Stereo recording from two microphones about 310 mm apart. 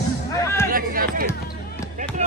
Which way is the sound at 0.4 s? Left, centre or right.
Centre.